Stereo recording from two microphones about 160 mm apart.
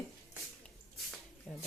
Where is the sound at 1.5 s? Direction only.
5° left (ahead or behind).